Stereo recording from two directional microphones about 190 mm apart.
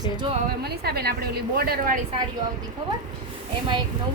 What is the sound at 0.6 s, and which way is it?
A woman's voice, 55° right (ahead or behind).